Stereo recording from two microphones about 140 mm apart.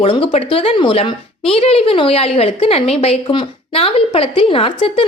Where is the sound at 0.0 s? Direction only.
40° left (ahead or behind).